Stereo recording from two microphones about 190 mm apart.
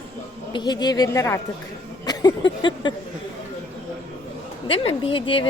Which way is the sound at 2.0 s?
20° left (ahead or behind).